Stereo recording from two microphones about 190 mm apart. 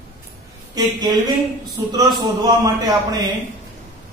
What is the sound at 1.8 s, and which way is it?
Speech, 20° right (ahead or behind).